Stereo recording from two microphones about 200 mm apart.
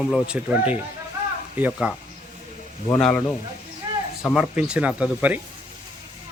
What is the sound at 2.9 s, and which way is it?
Speech, 5° left (ahead or behind).